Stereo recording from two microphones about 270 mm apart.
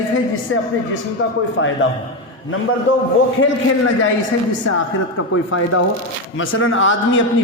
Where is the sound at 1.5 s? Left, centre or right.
Left.